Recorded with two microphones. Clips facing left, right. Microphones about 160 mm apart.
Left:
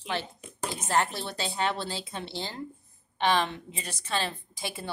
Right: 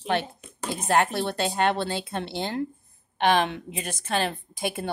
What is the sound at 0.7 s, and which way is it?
A woman's voice, 60° right (ahead or behind).